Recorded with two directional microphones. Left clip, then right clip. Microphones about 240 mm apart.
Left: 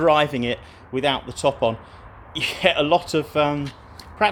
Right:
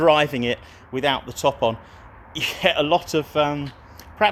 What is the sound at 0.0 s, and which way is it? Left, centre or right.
Speech, right.